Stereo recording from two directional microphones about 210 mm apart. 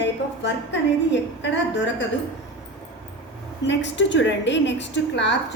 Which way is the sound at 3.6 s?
60° left (ahead or behind).